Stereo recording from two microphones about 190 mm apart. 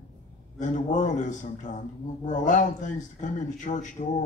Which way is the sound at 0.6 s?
40° left (ahead or behind).